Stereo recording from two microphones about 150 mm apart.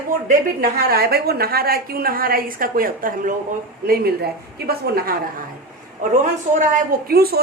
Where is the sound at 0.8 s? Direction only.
85° right; by 3.3 s 65° right (ahead or behind).